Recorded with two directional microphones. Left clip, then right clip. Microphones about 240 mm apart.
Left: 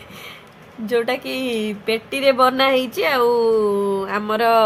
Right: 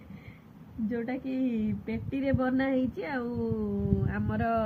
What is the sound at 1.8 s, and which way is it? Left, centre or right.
Speech, centre.